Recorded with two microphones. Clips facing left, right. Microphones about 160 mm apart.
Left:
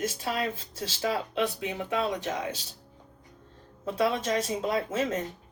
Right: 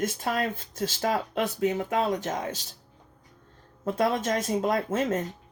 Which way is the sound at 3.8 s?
50° right (ahead or behind).